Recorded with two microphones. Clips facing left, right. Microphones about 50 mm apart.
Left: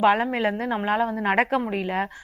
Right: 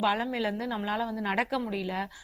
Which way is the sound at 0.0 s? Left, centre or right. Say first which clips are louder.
Left 8 dB; left.